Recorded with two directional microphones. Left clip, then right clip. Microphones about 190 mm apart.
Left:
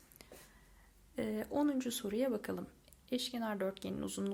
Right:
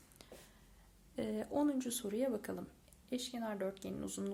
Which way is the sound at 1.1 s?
10° left (ahead or behind).